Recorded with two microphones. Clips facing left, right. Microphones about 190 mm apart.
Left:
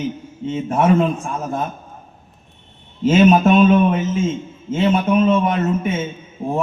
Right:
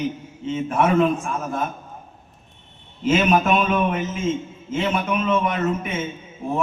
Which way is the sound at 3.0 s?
30° left (ahead or behind).